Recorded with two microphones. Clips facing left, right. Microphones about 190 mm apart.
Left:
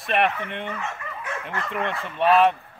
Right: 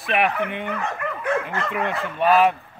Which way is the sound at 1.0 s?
60° right (ahead or behind).